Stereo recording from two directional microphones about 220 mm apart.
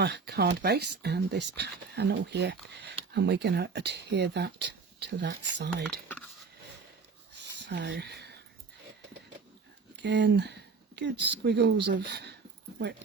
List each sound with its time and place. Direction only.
0.0 s speech: 50° right (ahead or behind)
7.7 s speech: 50° right (ahead or behind)
9.9 s speech: 50° right (ahead or behind)